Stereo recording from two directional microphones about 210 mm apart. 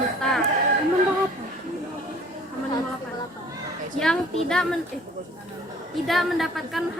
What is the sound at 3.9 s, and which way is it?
Speech, 5° left (ahead or behind).